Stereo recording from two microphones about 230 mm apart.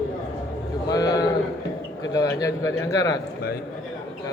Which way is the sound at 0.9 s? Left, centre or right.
Centre.